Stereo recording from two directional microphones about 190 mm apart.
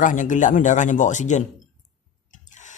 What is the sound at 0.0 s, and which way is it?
Speech, 45° left (ahead or behind).